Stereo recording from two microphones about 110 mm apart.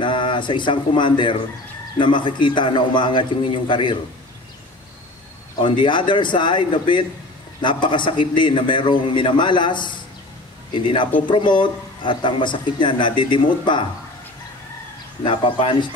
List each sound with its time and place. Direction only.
0.0 s a man's voice: 45° left (ahead or behind)
5.6 s a man's voice: 50° left (ahead or behind)
15.2 s a man's voice: 50° left (ahead or behind)